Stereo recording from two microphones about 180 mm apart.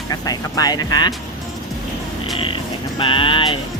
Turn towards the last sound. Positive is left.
turn(degrees=30)  # may be behind; listen again after turning